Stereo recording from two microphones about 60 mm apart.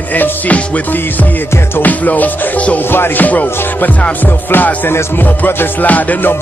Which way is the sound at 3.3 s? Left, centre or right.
Left.